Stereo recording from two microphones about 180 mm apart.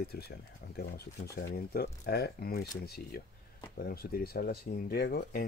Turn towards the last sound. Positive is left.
turn(degrees=55)  # may be behind; listen again after turning